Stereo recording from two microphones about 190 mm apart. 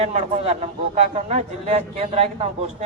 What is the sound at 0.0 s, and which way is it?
A man's voice, 35° right (ahead or behind).